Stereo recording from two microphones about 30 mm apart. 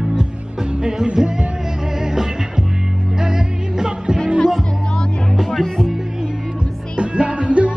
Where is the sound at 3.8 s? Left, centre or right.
Right.